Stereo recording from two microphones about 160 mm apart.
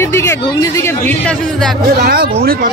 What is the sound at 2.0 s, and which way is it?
Speech, 70° right (ahead or behind).